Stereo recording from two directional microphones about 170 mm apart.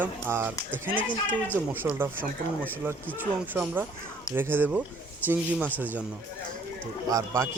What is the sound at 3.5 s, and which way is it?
Speech, 10° right (ahead or behind).